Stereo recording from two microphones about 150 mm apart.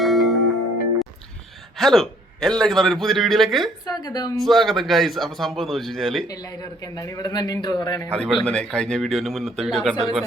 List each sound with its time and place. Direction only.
0.0 s music: centre (ahead or behind)
1.8 s a man's voice: centre (ahead or behind)
3.8 s a man's voice: 25° left (ahead or behind)
4.4 s a man's voice: centre (ahead or behind)
6.2 s a man's voice: 25° left (ahead or behind)
8.2 s a man's voice: 5° left (ahead or behind)